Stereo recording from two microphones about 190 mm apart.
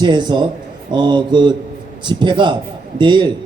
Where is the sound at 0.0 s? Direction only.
25° right (ahead or behind).